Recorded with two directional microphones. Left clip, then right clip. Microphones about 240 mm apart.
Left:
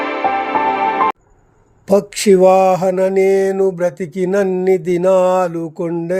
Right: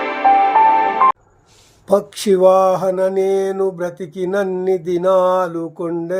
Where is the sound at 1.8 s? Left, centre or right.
Left.